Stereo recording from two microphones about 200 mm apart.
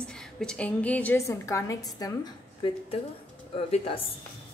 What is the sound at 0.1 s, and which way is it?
A woman's voice, 5° left (ahead or behind).